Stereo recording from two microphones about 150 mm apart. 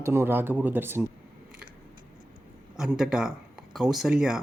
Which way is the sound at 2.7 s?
5° right (ahead or behind).